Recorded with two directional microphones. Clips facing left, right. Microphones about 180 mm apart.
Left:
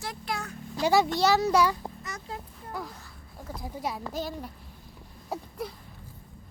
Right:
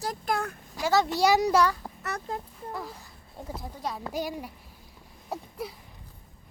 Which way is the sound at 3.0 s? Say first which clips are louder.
Right 2 dB; 15° right (ahead or behind).